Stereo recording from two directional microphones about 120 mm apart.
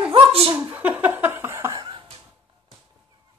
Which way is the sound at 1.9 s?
45° right (ahead or behind).